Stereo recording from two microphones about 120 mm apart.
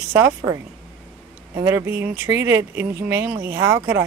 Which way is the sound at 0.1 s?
20° right (ahead or behind).